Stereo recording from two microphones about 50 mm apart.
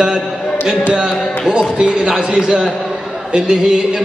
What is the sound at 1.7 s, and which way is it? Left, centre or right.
A man's voice, right.